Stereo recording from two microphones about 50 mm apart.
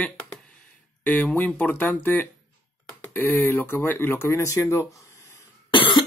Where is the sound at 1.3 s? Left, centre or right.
Left.